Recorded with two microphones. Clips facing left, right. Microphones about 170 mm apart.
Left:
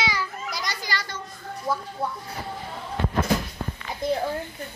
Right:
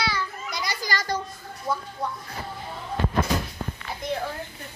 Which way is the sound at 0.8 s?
40° right (ahead or behind).